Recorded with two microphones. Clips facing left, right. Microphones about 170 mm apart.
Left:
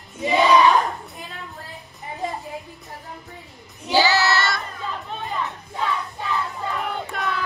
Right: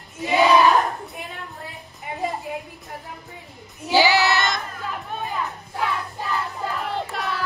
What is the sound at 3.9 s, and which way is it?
Child singing, 15° right (ahead or behind).